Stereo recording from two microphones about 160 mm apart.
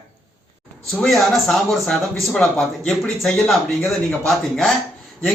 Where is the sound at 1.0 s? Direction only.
Centre (ahead or behind).